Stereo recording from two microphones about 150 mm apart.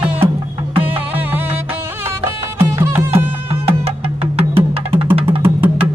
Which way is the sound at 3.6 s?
40° right (ahead or behind).